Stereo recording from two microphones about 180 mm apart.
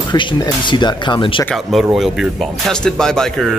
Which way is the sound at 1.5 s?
Centre (ahead or behind).